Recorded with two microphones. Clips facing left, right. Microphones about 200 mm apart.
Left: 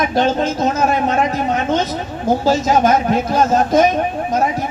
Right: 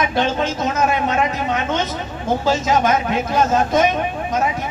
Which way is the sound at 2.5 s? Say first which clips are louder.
Left 3 dB; 40° left (ahead or behind).